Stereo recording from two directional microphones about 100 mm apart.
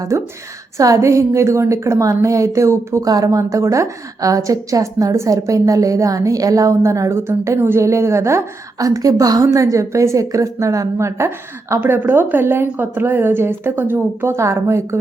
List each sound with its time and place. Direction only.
0.1 s a woman's voice: 30° right (ahead or behind)